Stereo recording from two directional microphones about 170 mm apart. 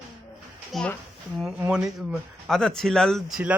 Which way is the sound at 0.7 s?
5° left (ahead or behind).